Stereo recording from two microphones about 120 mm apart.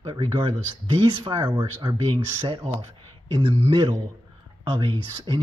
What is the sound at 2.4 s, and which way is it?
Speech, 50° right (ahead or behind).